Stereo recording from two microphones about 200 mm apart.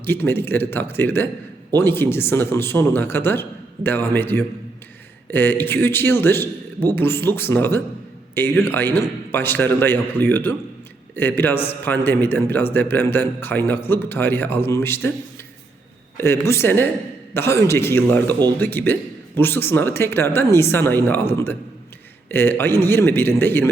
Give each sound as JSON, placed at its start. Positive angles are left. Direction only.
{"t": 0.0, "sound": "a man's voice", "side_deg": 10}
{"t": 16.1, "sound": "a man's voice", "side_deg": 10}